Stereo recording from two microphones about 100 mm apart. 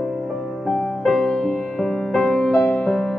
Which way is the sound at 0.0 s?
Centre (ahead or behind).